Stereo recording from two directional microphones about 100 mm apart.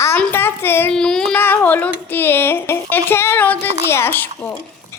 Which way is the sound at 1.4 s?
20° left (ahead or behind).